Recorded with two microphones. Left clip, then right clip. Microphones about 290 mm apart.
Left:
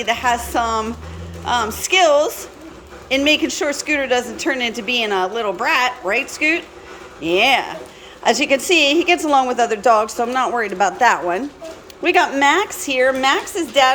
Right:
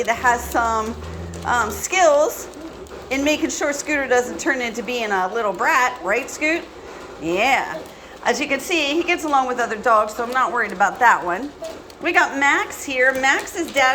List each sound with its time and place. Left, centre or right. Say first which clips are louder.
0.0 s a woman's voice: even; centre
2.0 s a woman's voice: left 1 dB; centre
3.2 s a woman's voice: left 4 dB; centre